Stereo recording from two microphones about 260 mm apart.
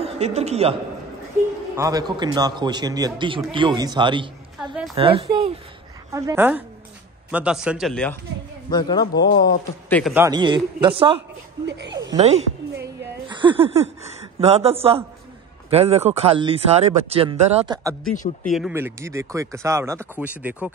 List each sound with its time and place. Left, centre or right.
0.0 s a man's voice: right
1.8 s speech: centre
6.1 s a man's voice: centre
8.6 s a man's voice: centre
9.1 s speech: left
9.4 s a man's voice: centre
10.1 s speech: centre
11.6 s speech: right
12.1 s speech: right
18.4 s speech: centre